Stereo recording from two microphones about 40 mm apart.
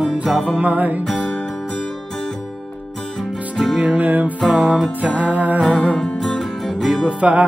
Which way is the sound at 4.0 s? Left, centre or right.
Right.